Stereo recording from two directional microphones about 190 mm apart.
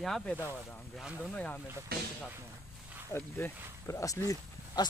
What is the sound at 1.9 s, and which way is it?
Speech, 55° right (ahead or behind).